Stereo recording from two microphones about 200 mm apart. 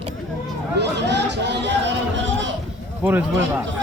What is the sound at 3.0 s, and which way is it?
Speech, 10° right (ahead or behind).